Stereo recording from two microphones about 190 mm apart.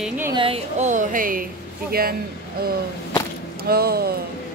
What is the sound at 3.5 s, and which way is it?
Speech, 55° right (ahead or behind).